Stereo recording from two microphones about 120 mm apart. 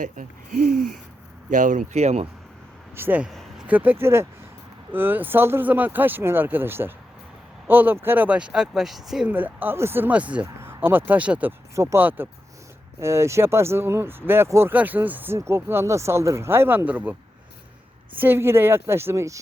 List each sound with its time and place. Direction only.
1.5 s speech: 90° right; by 2.2 s 65° right (ahead or behind)
2.9 s speech: 15° right (ahead or behind)
9.3 s speech: 15° right (ahead or behind)
11.7 s speech: 25° right (ahead or behind)
18.2 s speech: 20° right (ahead or behind)